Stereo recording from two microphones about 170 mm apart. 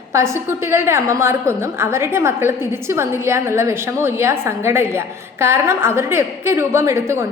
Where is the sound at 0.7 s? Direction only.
15° right (ahead or behind).